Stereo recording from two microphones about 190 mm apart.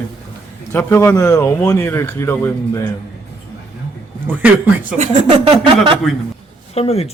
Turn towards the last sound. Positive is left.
turn(degrees=30)  # may be behind; listen again after turning